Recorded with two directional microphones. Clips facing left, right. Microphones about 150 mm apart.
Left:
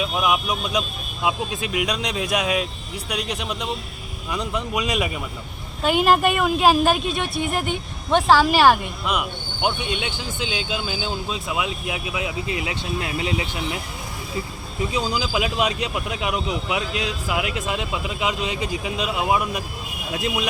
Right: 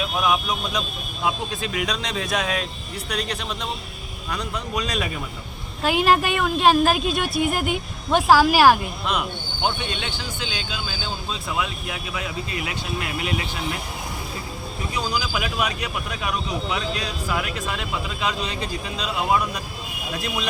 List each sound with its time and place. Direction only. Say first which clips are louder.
0.0 s vehicle: left 1 dB; 10° left (ahead or behind)
1.2 s speech: left 1 dB; 10° left (ahead or behind)
4.7 s speech: left 1 dB; 15° left (ahead or behind)
5.8 s speech: left 2 dB; centre (ahead or behind)
9.0 s speech: left 1 dB; 10° left (ahead or behind)
14.9 s speech: left 2 dB; 25° left (ahead or behind)